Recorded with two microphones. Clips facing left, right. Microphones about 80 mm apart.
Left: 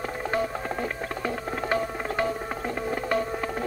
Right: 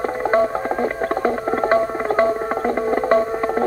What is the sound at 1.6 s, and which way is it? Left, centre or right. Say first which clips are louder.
Music: right 9 dB; right.